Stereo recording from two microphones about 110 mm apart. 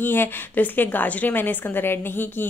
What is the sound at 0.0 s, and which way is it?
A woman's voice, 20° left (ahead or behind).